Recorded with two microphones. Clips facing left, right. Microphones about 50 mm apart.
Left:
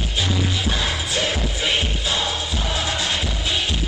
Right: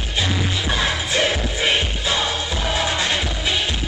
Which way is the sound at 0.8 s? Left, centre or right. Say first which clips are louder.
Right 3 dB; right.